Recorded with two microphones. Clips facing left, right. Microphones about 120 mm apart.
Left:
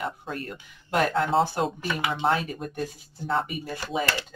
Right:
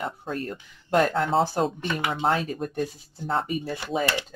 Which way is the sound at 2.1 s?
40° right (ahead or behind).